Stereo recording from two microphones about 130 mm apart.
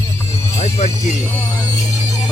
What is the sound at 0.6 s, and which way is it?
Music, 60° left (ahead or behind).